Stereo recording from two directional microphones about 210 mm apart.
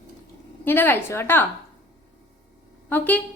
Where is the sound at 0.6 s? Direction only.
10° left (ahead or behind).